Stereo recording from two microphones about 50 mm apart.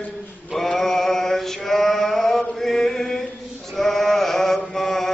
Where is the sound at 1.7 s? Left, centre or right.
Centre.